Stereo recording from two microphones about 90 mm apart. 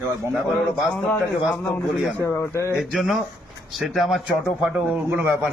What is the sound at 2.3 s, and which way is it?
Speech, 35° left (ahead or behind).